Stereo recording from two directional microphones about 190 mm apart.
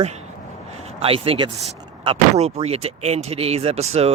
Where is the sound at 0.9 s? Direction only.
30° right (ahead or behind).